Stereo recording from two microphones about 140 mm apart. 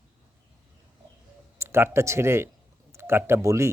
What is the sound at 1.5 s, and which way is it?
Speech, 15° right (ahead or behind).